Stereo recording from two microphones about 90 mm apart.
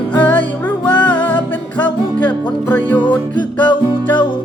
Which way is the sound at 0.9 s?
55° left (ahead or behind).